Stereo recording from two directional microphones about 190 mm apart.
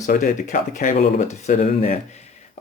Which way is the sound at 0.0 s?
40° left (ahead or behind).